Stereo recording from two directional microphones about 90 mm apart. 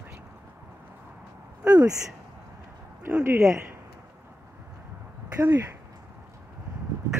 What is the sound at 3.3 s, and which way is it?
Speech, 35° right (ahead or behind).